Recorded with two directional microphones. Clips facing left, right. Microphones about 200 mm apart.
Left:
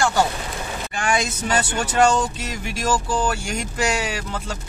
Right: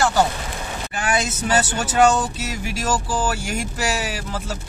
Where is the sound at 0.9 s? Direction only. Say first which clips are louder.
Even; 5° right (ahead or behind).